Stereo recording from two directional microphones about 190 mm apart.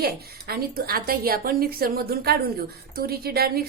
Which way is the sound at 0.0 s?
55° right (ahead or behind).